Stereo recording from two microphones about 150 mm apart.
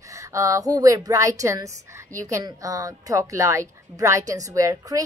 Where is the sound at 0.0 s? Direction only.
20° right (ahead or behind).